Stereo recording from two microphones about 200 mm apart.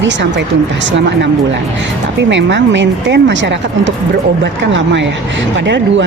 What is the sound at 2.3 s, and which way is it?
Speech, 65° right (ahead or behind).